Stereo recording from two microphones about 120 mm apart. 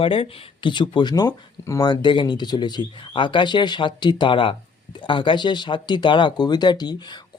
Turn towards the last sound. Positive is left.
turn(degrees=35)  # may be behind; listen again after turning